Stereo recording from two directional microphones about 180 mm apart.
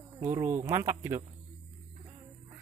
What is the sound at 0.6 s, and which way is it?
Speech, 15° right (ahead or behind).